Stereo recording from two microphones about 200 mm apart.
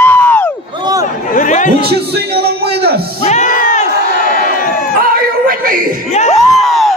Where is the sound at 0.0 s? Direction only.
10° left (ahead or behind).